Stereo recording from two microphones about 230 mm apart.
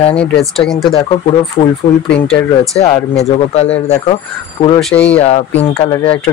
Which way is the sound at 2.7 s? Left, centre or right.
Left.